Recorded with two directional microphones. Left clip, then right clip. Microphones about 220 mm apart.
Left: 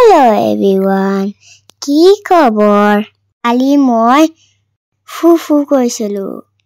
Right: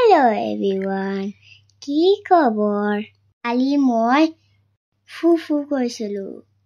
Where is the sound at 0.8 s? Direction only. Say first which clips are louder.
Left 11 dB; 25° left (ahead or behind).